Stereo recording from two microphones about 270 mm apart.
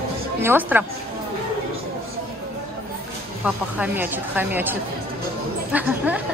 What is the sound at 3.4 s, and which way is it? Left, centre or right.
A woman's voice, centre.